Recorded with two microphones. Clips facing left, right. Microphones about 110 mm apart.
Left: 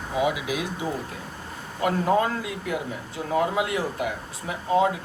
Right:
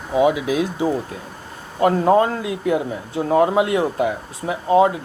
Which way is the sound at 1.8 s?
35° right (ahead or behind).